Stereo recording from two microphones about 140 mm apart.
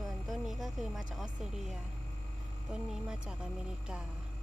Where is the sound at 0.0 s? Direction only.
Centre (ahead or behind).